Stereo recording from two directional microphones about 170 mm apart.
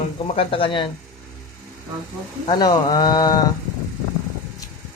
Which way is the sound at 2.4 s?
25° left (ahead or behind).